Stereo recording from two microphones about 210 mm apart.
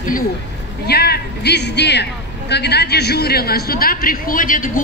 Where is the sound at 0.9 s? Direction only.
50° left (ahead or behind).